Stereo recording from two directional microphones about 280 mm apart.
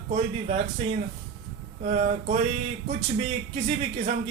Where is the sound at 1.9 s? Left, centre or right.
Right.